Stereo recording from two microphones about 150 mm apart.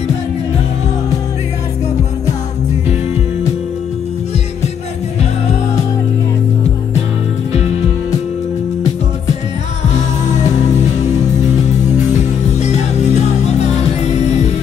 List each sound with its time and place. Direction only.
12.5 s music: 50° left (ahead or behind)